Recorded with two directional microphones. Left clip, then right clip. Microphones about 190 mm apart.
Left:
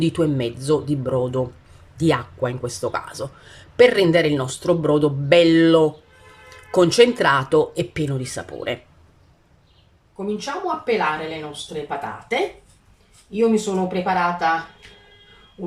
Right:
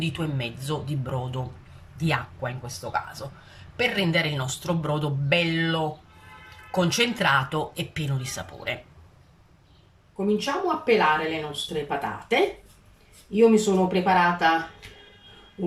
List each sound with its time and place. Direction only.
0.0 s speech: 30° left (ahead or behind)
2.0 s speech: 35° left (ahead or behind)
10.2 s speech: centre (ahead or behind)